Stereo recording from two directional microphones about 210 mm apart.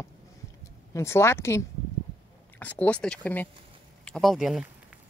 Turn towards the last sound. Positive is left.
turn(degrees=0)  # may be behind; listen again after turning